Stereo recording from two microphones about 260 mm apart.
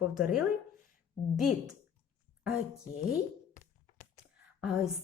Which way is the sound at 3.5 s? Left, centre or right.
Left.